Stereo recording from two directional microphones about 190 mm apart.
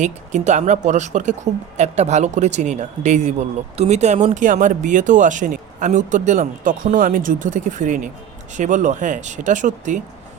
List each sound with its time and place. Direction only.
0.0 s speech: 40° right (ahead or behind)